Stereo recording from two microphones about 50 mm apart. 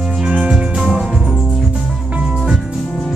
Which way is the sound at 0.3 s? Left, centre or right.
Right.